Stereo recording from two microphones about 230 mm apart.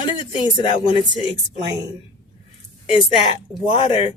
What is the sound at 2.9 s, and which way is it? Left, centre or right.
A woman's voice, left.